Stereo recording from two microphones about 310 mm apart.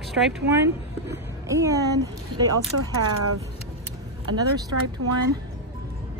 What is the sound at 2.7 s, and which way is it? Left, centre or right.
Speech, right.